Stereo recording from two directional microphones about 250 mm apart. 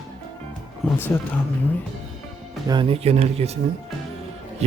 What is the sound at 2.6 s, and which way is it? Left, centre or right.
Speech, centre.